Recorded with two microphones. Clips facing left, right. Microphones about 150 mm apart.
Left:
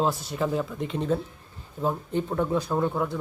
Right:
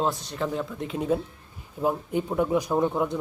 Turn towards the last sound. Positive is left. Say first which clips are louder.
# right 2 dB
turn(degrees=-20)  # may be behind; listen again after turning